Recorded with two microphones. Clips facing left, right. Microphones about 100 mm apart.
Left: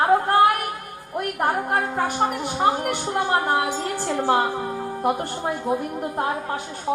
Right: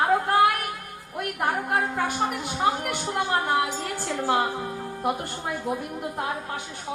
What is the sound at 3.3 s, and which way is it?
Speech, 35° left (ahead or behind).